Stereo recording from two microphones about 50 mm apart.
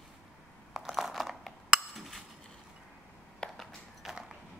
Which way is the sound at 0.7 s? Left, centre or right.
Centre.